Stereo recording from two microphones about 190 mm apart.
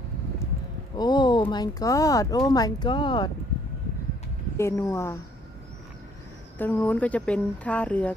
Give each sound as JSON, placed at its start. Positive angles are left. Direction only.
{"t": 0.9, "sound": "speech", "side_deg": 20}
{"t": 4.6, "sound": "speech", "side_deg": 15}
{"t": 6.6, "sound": "speech", "side_deg": 10}